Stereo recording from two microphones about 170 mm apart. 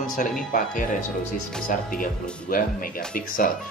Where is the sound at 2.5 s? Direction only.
55° left (ahead or behind).